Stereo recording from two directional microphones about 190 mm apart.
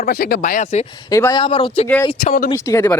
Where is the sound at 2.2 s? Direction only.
45° left (ahead or behind).